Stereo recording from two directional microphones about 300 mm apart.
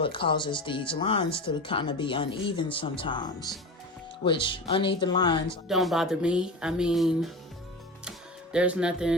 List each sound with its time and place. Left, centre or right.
0.0 s speech: centre
5.6 s speech: centre
8.5 s speech: centre